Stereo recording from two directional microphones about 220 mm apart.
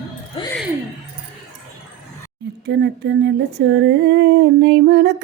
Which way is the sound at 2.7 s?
50° right (ahead or behind).